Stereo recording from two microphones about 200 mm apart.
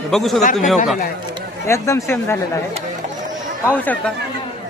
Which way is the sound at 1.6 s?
15° left (ahead or behind).